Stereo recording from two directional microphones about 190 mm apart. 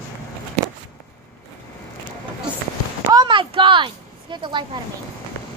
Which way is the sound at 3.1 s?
25° right (ahead or behind).